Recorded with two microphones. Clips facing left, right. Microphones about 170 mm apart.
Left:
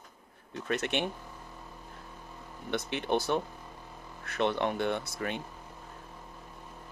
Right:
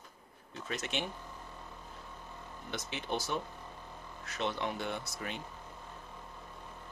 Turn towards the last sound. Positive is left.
turn(degrees=60)  # may be behind; listen again after turning